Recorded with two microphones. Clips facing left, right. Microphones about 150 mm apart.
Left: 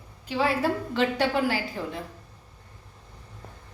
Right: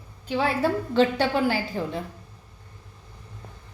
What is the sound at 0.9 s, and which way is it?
A woman's voice, 30° right (ahead or behind).